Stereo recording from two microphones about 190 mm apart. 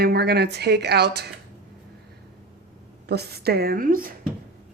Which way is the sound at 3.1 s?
55° right (ahead or behind).